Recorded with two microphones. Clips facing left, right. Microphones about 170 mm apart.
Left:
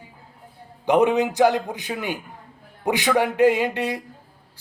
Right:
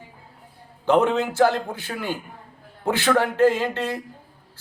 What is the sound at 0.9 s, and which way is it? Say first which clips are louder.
A man's voice: left 1 dB; 15° left (ahead or behind).